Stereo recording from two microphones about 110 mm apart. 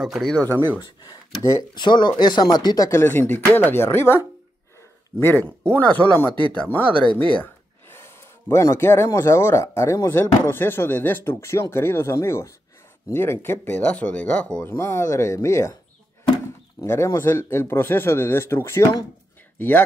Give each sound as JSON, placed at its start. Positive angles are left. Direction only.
{"t": 0.0, "sound": "speech", "side_deg": 0}
{"t": 1.4, "sound": "speech", "side_deg": 25}
{"t": 1.8, "sound": "speech", "side_deg": 45}
{"t": 5.2, "sound": "speech", "side_deg": 15}
{"t": 16.8, "sound": "speech", "side_deg": 25}